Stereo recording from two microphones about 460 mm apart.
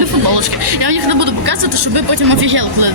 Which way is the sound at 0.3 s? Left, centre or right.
Right.